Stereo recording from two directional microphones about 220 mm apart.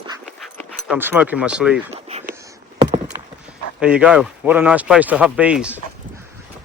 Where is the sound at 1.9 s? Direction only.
30° right (ahead or behind).